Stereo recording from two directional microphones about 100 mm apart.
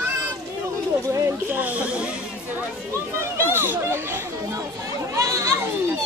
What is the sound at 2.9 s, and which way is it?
A child's voice, 25° right (ahead or behind).